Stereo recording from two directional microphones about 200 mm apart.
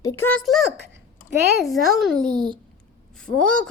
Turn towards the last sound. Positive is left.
turn(degrees=5)  # may be behind; listen again after turning